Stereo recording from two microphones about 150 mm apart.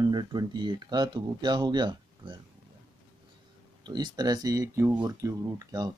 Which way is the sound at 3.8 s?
30° right (ahead or behind).